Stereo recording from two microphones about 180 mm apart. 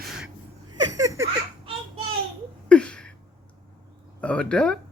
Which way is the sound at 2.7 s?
5° left (ahead or behind).